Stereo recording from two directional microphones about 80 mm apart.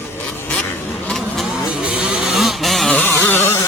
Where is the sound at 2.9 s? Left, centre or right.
Centre.